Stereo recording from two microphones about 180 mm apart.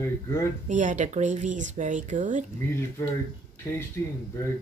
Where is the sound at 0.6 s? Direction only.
45° right (ahead or behind).